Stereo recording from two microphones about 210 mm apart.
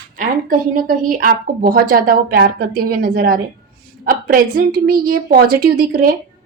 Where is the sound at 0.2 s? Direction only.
40° right (ahead or behind).